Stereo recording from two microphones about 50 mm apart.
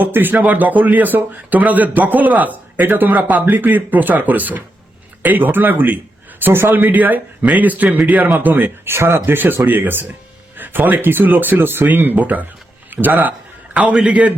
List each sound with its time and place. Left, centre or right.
0.0 s speech: right
6.4 s speech: right
8.8 s speech: right
9.2 s speech: right
14.0 s a man's voice: right